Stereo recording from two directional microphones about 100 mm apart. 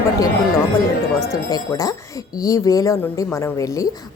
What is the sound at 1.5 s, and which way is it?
A woman's voice, 40° left (ahead or behind).